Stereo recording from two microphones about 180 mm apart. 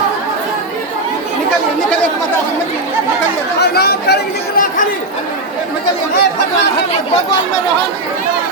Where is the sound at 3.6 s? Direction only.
60° left (ahead or behind).